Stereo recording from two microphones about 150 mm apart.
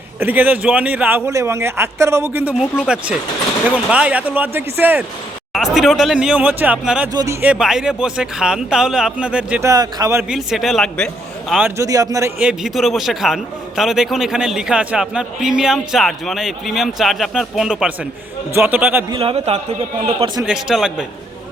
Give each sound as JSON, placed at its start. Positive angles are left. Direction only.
{"t": 0.2, "sound": "a man's voice", "side_deg": -10}
{"t": 5.5, "sound": "a man's voice", "side_deg": 0}
{"t": 7.1, "sound": "a man's voice", "side_deg": -25}
{"t": 7.4, "sound": "a man's voice", "side_deg": -5}
{"t": 9.6, "sound": "a man's voice", "side_deg": -25}
{"t": 10.2, "sound": "a man's voice", "side_deg": -5}
{"t": 11.6, "sound": "a man's voice", "side_deg": -20}
{"t": 12.4, "sound": "a man's voice", "side_deg": -5}
{"t": 19.1, "sound": "a man's voice", "side_deg": -40}
{"t": 20.4, "sound": "a man's voice", "side_deg": -5}